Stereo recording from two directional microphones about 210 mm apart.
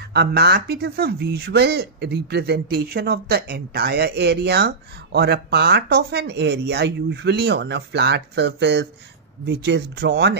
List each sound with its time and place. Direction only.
0.0 s speech: 50° right (ahead or behind)